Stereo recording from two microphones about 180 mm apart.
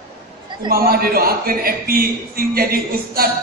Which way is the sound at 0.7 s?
55° right (ahead or behind).